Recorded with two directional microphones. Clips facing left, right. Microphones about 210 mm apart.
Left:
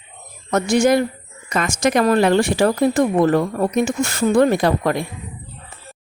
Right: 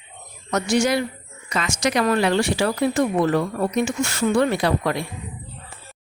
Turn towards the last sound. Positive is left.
turn(degrees=45)  # may be behind; listen again after turning